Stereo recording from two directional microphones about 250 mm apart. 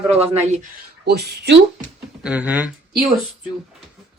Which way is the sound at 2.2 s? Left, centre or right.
Centre.